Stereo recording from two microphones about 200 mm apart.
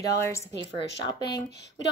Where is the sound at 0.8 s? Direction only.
55° left (ahead or behind).